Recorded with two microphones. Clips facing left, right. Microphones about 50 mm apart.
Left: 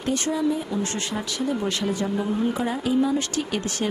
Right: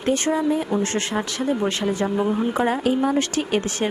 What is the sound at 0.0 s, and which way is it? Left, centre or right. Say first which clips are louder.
Speech: right 3 dB; right.